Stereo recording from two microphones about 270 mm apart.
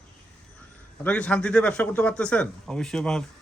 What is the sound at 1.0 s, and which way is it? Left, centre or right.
Speech, centre.